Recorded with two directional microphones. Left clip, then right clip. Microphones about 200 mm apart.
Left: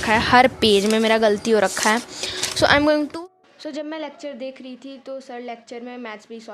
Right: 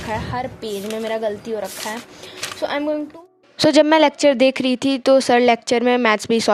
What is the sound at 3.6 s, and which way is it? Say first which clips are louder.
Speech: right 17 dB; 50° right (ahead or behind).